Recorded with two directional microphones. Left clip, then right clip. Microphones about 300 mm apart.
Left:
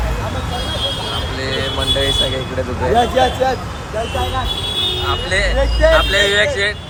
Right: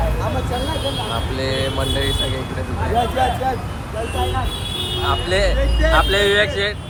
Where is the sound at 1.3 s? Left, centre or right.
Centre.